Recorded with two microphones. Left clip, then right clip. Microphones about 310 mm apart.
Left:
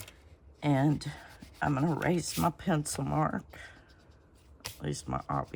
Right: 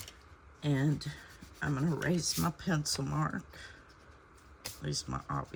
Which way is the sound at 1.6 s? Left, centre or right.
Left.